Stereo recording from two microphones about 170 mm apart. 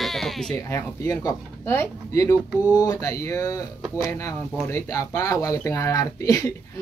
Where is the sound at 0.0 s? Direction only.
Centre (ahead or behind).